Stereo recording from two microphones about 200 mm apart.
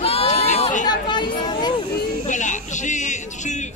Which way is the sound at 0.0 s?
30° left (ahead or behind).